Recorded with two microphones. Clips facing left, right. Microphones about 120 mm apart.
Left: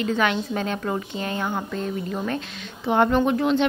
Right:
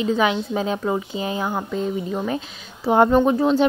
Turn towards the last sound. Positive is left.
turn(degrees=-35)  # may be behind; listen again after turning